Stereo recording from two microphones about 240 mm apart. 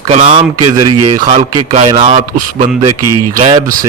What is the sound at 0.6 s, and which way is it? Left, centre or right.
Speech, right.